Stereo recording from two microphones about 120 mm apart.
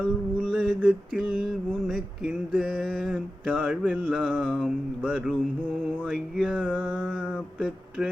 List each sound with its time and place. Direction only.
0.0 s mantra: 5° left (ahead or behind)
0.8 s mantra: 10° right (ahead or behind)
3.6 s speech: 10° right (ahead or behind)
4.0 s mantra: 5° left (ahead or behind)
5.0 s speech: 10° right (ahead or behind)
6.1 s mantra: centre (ahead or behind)